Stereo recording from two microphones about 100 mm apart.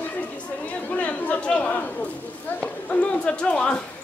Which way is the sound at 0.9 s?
15° left (ahead or behind).